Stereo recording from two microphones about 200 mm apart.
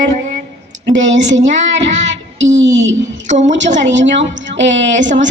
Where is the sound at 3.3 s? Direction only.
35° right (ahead or behind).